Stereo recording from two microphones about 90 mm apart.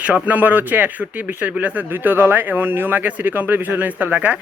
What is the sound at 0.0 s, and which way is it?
Speech, 20° right (ahead or behind).